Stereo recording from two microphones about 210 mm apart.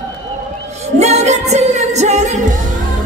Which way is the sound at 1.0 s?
30° right (ahead or behind).